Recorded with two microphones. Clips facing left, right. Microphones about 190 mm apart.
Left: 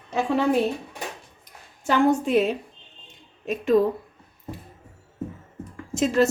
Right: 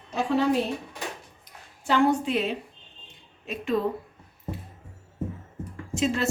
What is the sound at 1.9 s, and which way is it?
A woman's voice, 45° left (ahead or behind).